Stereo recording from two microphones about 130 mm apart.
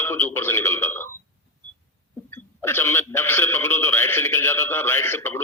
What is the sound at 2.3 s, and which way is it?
A man's voice, 20° left (ahead or behind).